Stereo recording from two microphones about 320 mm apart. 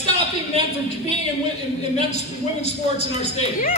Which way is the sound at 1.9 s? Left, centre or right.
Centre.